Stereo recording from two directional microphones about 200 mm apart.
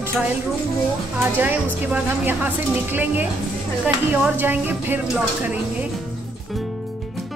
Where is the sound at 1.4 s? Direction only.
10° right (ahead or behind).